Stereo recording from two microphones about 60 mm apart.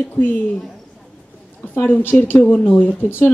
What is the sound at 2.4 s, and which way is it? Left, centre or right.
Speech, left.